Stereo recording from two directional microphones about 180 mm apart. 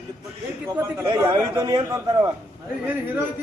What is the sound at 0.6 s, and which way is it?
Speech, 15° right (ahead or behind).